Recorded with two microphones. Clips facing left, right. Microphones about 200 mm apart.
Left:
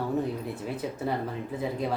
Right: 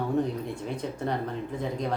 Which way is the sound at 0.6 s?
5° left (ahead or behind).